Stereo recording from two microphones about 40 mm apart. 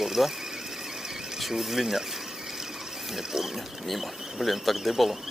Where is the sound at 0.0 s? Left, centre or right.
Centre.